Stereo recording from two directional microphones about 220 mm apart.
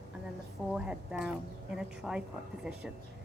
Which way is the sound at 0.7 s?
5° right (ahead or behind).